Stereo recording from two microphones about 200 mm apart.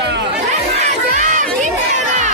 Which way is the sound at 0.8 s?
40° right (ahead or behind).